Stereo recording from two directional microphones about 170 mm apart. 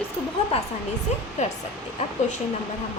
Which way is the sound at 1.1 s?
40° left (ahead or behind).